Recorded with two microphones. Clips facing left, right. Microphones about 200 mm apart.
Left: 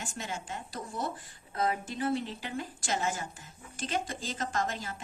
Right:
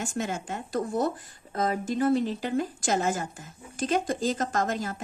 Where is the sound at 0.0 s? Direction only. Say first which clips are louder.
Right 8 dB; 45° right (ahead or behind).